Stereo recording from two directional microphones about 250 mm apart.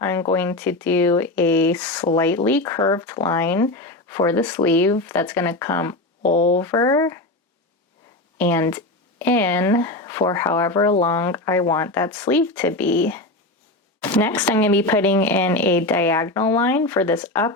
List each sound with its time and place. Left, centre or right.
0.0 s speech: centre
6.2 s speech: left
6.6 s speech: centre
8.4 s speech: centre